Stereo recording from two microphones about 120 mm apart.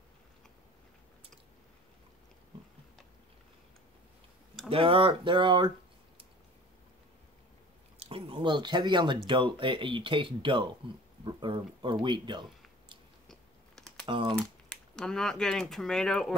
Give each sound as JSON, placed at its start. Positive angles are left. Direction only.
{"t": 4.6, "sound": "speech", "side_deg": -50}
{"t": 8.0, "sound": "speech", "side_deg": -45}
{"t": 13.3, "sound": "biting", "side_deg": 5}
{"t": 14.0, "sound": "speech", "side_deg": -40}
{"t": 15.0, "sound": "speech", "side_deg": 5}